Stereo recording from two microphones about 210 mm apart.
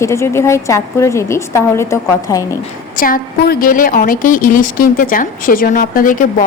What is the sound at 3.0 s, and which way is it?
A woman's voice, 40° left (ahead or behind).